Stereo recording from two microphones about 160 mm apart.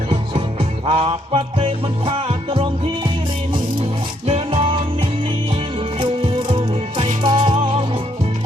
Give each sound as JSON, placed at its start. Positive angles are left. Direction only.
{"t": 0.1, "sound": "music", "side_deg": -35}
{"t": 4.3, "sound": "music", "side_deg": -35}